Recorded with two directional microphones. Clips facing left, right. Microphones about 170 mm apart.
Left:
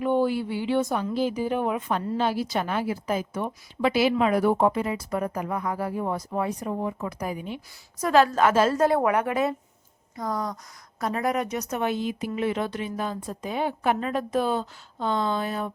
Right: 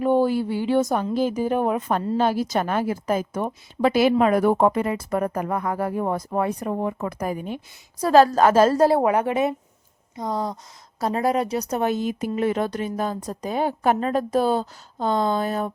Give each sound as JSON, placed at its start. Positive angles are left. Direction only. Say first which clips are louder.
{"t": 0.0, "sound": "speech", "louder": "right 4 dB", "side_deg": -40}
{"t": 7.9, "sound": "a woman's voice", "louder": "right 4 dB", "side_deg": -35}